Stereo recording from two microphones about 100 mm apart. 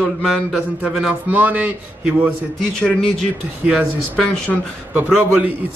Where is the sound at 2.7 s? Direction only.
5° left (ahead or behind).